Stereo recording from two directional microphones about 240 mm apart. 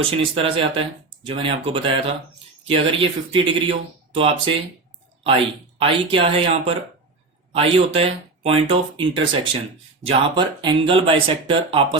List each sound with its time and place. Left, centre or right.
0.1 s speech: right